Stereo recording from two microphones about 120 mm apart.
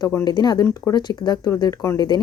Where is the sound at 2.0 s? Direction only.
35° left (ahead or behind).